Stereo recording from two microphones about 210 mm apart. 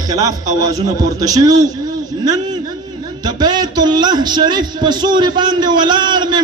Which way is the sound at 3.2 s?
20° right (ahead or behind).